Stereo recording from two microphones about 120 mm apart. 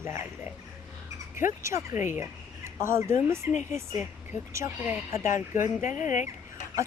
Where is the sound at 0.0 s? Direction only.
20° right (ahead or behind).